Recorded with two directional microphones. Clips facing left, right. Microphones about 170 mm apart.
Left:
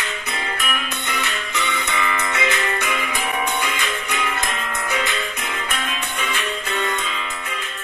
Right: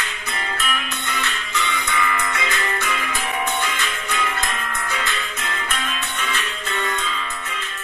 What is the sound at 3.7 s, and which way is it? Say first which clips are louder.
Music: left 1 dB; 15° left (ahead or behind).